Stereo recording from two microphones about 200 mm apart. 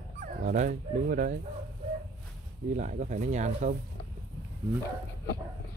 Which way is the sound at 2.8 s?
40° right (ahead or behind).